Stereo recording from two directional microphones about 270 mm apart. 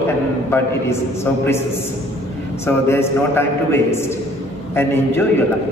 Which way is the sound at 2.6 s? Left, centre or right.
Centre.